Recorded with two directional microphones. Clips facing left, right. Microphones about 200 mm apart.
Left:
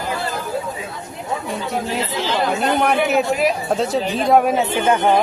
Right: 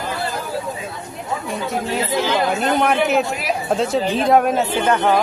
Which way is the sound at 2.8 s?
Centre (ahead or behind).